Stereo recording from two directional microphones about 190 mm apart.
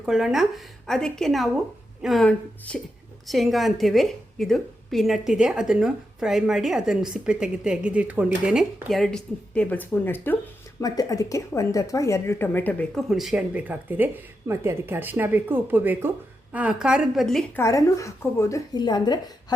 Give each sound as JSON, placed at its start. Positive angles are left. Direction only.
{"t": 0.0, "sound": "a woman's voice", "side_deg": -5}
{"t": 17.6, "sound": "a woman's voice", "side_deg": 15}